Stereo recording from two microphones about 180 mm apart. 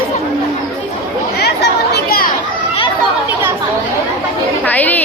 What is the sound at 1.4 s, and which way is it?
Chatter, 65° left (ahead or behind).